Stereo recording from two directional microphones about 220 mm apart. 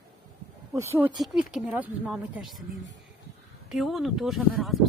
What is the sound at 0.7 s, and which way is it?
Speech, 10° right (ahead or behind).